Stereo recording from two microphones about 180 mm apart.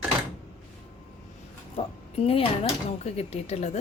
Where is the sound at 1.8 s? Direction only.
35° left (ahead or behind).